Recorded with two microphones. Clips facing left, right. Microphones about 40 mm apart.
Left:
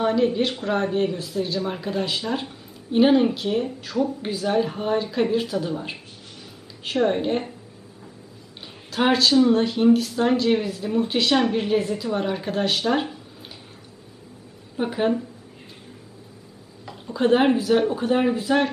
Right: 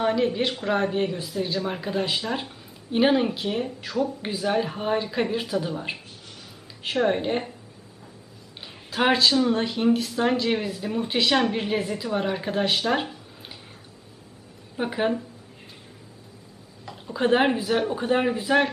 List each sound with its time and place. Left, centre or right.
0.0 s a woman's voice: centre
8.9 s speech: centre
9.3 s a woman's voice: centre
14.8 s a woman's voice: centre
16.8 s a sound: centre
17.7 s a woman's voice: centre